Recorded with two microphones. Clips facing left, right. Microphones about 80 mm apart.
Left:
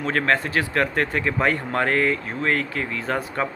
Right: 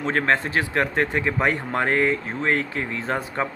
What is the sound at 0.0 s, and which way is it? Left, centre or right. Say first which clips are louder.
Speech: even; right.